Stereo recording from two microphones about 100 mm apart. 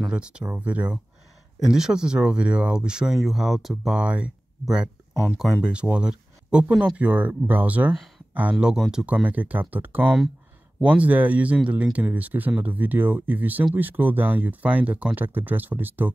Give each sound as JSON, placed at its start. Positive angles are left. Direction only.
{"t": 0.1, "sound": "speech", "side_deg": -10}